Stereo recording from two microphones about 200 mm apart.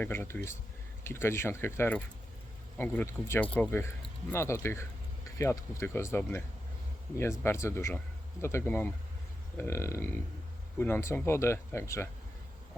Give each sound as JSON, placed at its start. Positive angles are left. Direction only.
{"t": 0.0, "sound": "speech", "side_deg": 10}